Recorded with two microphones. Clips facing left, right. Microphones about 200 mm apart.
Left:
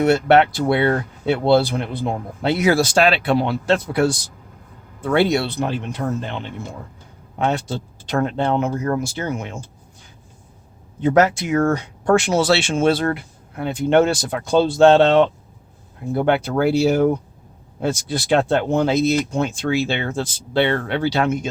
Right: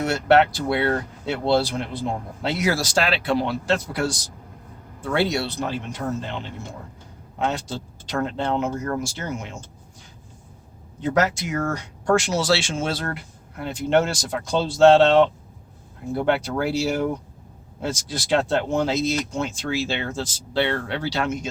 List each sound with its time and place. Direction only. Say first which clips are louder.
0.0 s speech: left 4 dB; 60° left (ahead or behind)
7.3 s a man's voice: left 4 dB; 60° left (ahead or behind)
11.0 s speech: left 6 dB; 60° left (ahead or behind)